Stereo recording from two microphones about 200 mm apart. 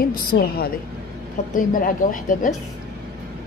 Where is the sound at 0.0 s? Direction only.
45° left (ahead or behind).